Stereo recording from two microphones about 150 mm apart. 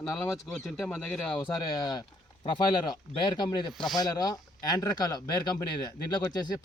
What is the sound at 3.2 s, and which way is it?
Speech, 30° left (ahead or behind).